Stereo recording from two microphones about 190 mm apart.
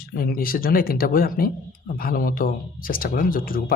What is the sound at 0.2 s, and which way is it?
Speech, 50° left (ahead or behind).